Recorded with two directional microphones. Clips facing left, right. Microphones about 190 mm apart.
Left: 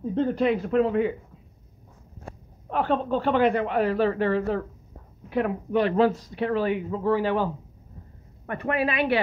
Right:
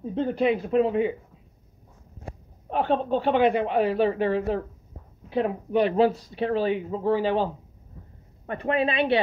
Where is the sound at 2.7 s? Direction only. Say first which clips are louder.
Right 1 dB; 20° right (ahead or behind).